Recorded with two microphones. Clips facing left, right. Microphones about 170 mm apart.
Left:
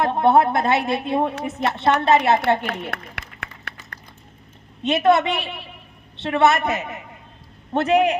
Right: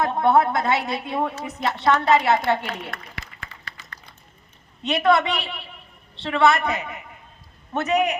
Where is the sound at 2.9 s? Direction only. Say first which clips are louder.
Left 3 dB; 65° left (ahead or behind).